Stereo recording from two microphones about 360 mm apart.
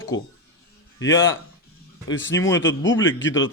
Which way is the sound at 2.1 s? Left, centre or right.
Left.